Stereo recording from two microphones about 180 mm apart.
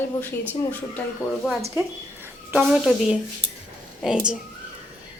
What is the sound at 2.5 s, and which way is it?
Speech, 5° right (ahead or behind).